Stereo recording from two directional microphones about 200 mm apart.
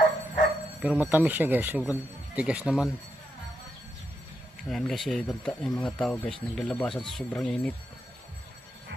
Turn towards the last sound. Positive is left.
turn(degrees=5)  # may be behind; listen again after turning